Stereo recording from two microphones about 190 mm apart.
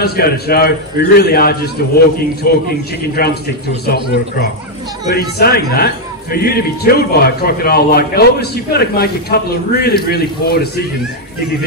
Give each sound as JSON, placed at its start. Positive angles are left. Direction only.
{"t": 0.0, "sound": "a man's voice", "side_deg": 55}